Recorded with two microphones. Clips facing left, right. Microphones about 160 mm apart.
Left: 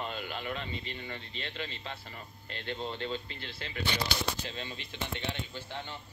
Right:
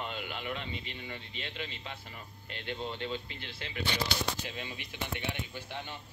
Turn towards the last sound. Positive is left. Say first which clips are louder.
# even
turn(degrees=-15)  # may be behind; listen again after turning